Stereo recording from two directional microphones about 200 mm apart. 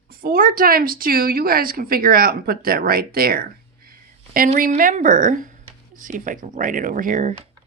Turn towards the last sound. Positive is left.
turn(degrees=-40)  # may be behind; listen again after turning